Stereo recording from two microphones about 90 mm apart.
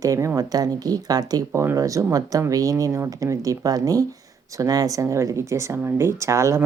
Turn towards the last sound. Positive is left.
turn(degrees=-35)  # may be behind; listen again after turning